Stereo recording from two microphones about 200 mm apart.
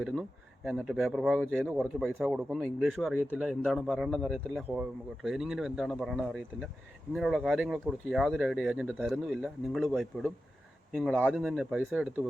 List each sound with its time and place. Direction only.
0.0 s speech: centre (ahead or behind)